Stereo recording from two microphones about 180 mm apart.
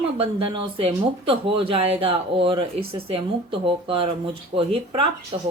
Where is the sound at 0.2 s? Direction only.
30° right (ahead or behind).